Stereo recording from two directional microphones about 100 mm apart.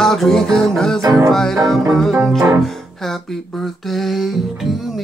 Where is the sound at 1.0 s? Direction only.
35° right (ahead or behind).